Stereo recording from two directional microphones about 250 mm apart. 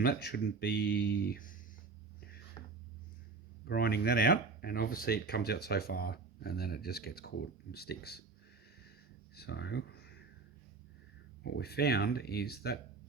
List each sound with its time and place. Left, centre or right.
0.0 s speech: left
2.6 s a sound: centre
3.7 s speech: left
9.3 s speech: left
11.4 s speech: left